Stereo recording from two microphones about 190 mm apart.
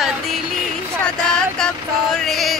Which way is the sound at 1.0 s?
5° left (ahead or behind).